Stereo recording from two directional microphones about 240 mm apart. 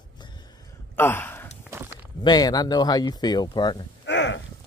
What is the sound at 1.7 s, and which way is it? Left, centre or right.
Walk, centre.